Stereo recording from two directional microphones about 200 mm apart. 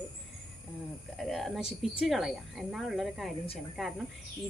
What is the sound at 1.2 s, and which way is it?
Speech, centre (ahead or behind).